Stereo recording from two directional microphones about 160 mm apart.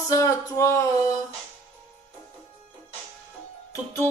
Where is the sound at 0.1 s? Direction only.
20° left (ahead or behind).